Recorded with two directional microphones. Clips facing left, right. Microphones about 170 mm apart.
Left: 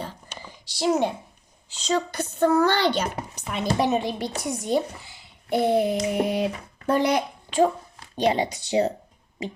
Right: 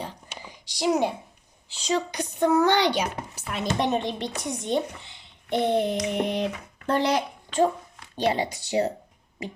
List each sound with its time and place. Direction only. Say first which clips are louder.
0.0 s whispering: left 1 dB; 15° right (ahead or behind)
1.8 s speech: left 1 dB; 15° right (ahead or behind)
3.4 s a woman's voice: left 2 dB; centre (ahead or behind); by 8.9 s 20° left (ahead or behind)